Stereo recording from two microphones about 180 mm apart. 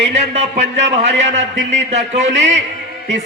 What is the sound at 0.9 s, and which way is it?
Speech, 85° right.